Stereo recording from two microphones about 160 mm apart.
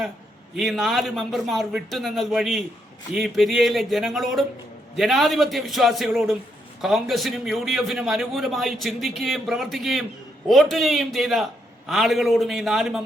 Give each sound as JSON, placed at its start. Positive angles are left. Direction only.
{"t": 0.5, "sound": "a man's voice", "side_deg": 0}